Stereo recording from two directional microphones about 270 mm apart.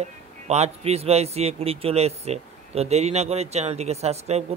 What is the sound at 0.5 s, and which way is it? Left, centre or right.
A man's voice, right.